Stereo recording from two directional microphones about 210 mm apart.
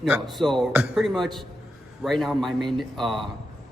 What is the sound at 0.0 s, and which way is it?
Speech, centre (ahead or behind).